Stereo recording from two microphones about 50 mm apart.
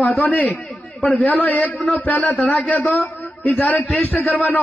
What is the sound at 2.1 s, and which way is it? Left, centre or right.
Speech, centre.